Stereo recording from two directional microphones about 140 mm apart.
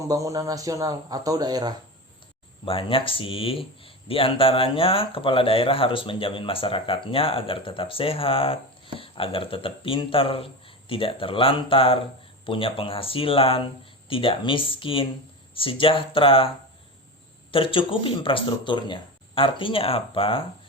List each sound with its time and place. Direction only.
0.1 s a man's voice: 25° right (ahead or behind)
2.6 s speech: 40° left (ahead or behind)
17.5 s speech: 40° left (ahead or behind)